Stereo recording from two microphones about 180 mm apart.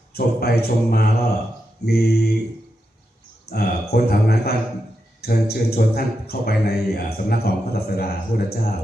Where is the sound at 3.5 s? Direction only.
60° left (ahead or behind).